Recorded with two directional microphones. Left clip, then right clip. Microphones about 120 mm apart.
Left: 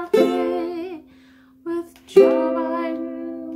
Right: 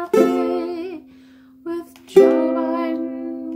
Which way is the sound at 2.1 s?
55° right (ahead or behind).